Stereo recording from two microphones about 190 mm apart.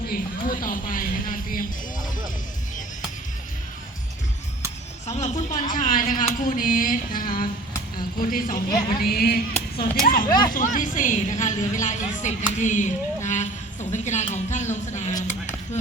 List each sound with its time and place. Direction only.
0.1 s speech: 45° left (ahead or behind)
5.1 s a woman's voice: 40° left (ahead or behind)